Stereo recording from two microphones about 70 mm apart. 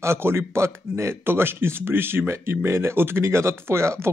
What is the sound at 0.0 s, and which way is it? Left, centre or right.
Speech, right.